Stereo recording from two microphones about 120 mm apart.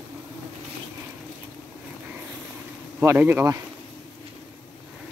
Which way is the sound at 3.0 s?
20° right (ahead or behind).